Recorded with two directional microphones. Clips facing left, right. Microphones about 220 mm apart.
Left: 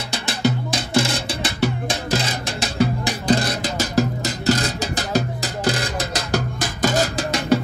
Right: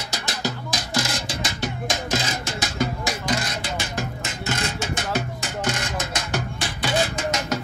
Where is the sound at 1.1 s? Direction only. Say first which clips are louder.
Left 4 dB; 60° left (ahead or behind).